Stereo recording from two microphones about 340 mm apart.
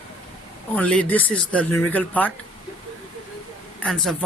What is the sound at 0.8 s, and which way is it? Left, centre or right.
A man's voice, centre.